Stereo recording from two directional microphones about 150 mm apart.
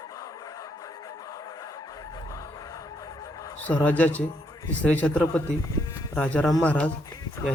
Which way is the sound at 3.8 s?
10° left (ahead or behind).